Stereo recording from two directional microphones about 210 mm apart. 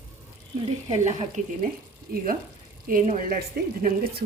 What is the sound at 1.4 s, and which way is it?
Speech, 35° right (ahead or behind).